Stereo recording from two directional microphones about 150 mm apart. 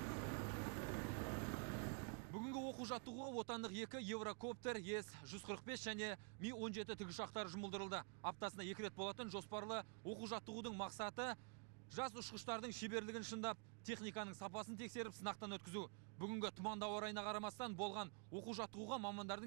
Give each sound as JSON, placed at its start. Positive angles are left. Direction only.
{"t": 0.0, "sound": "vehicle", "side_deg": 30}
{"t": 11.9, "sound": "speech", "side_deg": 30}